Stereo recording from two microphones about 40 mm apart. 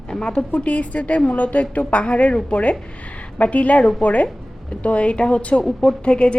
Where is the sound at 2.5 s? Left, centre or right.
Left.